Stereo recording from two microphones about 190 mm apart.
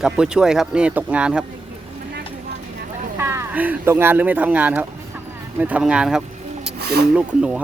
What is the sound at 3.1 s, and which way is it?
Speech, 15° right (ahead or behind).